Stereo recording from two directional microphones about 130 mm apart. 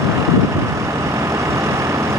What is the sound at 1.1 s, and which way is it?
Vehicle, 20° right (ahead or behind).